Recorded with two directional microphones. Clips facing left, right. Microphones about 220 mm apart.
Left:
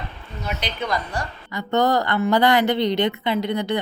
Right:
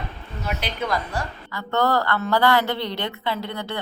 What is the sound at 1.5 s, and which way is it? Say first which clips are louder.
A woman's voice: left 2 dB; 20° left (ahead or behind).